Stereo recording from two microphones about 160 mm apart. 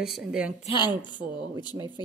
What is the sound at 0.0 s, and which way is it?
Speech, 5° right (ahead or behind).